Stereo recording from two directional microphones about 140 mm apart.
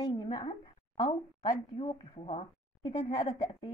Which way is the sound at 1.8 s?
40° left (ahead or behind).